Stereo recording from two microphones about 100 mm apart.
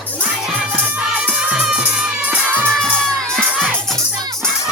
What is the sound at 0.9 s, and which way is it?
Music, 15° right (ahead or behind).